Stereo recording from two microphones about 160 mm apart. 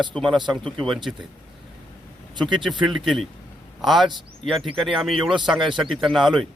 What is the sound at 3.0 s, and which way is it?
Speech, centre (ahead or behind).